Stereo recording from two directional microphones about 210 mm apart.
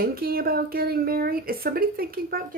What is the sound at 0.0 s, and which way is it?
Speech, 45° right (ahead or behind).